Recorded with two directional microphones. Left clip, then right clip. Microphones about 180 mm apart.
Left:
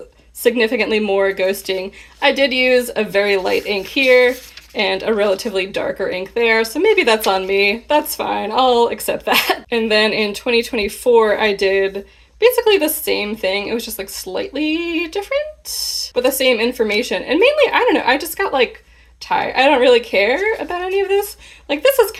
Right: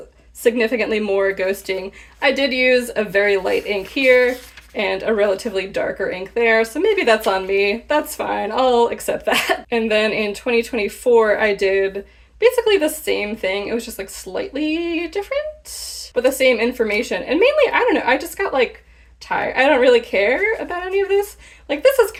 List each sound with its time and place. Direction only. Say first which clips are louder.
0.4 s a woman's voice: left 2 dB; 30° left (ahead or behind)